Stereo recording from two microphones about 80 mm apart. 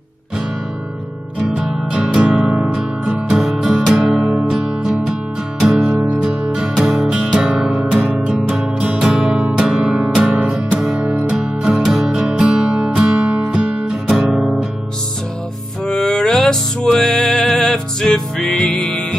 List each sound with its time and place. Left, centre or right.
1.4 s music: centre
9.8 s music: centre
15.9 s music: centre